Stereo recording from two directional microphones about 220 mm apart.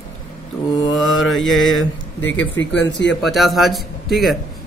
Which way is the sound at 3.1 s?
Centre (ahead or behind).